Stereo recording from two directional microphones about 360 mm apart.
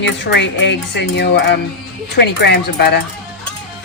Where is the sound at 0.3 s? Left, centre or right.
Left.